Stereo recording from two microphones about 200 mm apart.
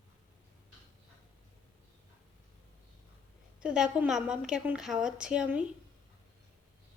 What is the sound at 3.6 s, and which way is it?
A woman's voice, 5° right (ahead or behind).